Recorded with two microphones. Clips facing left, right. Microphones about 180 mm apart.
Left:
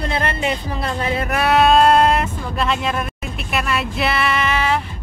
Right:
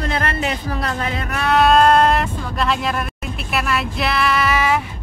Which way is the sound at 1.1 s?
10° left (ahead or behind).